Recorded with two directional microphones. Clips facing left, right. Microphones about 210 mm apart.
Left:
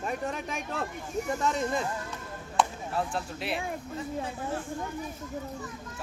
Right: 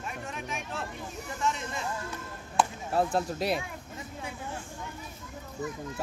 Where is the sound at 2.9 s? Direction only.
40° right (ahead or behind).